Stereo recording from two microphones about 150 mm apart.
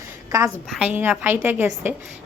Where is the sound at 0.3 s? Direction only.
20° right (ahead or behind).